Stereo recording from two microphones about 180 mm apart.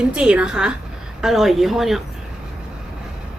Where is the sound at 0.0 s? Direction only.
5° right (ahead or behind).